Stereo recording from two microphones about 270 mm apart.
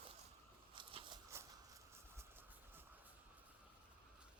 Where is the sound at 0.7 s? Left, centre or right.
Centre.